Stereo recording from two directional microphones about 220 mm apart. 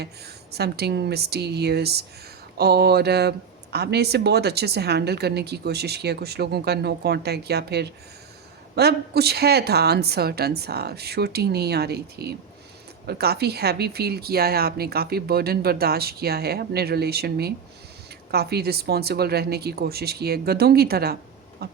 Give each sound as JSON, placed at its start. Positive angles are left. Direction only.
{"t": 0.5, "sound": "speech", "side_deg": -45}